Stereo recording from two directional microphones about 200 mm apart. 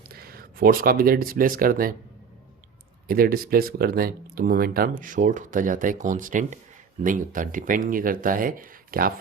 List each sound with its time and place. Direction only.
0.1 s speech: 50° right (ahead or behind)
3.1 s speech: 45° right (ahead or behind)